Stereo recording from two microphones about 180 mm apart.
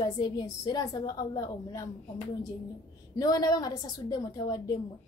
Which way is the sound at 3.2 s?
20° left (ahead or behind).